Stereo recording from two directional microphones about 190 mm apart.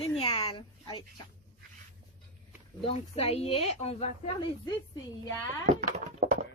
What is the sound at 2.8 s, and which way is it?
Speech, 30° left (ahead or behind).